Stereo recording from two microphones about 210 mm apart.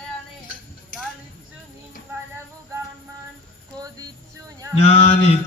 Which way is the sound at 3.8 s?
15° right (ahead or behind).